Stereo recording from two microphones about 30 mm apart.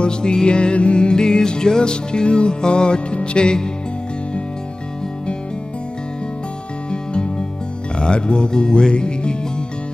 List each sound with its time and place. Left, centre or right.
0.0 s music: left
3.3 s speech: left
6.9 s music: left